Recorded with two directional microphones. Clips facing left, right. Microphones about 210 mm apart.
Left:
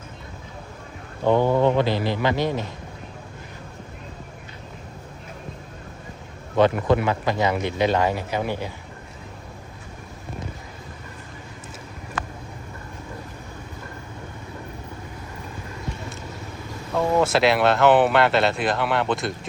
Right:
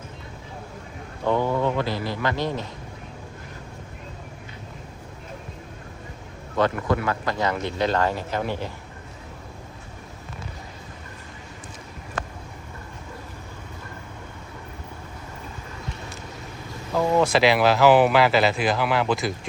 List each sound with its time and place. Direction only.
1.2 s speech: 25° left (ahead or behind)
6.6 s speech: 20° left (ahead or behind)
16.9 s speech: centre (ahead or behind)